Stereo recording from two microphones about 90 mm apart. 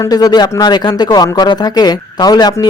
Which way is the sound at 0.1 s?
45° left (ahead or behind).